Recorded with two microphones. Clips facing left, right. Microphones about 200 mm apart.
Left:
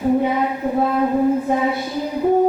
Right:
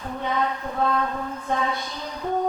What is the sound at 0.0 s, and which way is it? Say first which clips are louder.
Speech: left 9 dB; 10° left (ahead or behind).